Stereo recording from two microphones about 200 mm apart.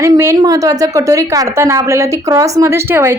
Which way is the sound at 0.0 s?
15° right (ahead or behind).